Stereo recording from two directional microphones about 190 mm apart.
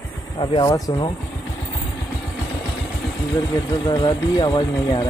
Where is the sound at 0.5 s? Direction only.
20° left (ahead or behind).